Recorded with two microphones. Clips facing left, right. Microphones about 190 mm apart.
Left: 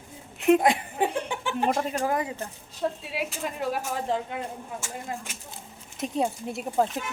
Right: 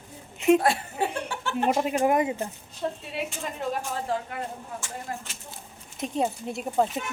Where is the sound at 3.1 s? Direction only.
5° left (ahead or behind).